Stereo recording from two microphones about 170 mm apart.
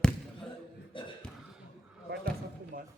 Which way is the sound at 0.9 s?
30° left (ahead or behind).